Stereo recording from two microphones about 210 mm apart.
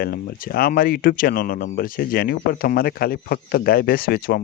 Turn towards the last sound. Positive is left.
turn(degrees=45)  # may be behind; listen again after turning